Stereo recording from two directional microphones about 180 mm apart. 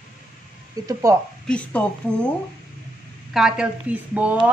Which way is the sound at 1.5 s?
5° left (ahead or behind).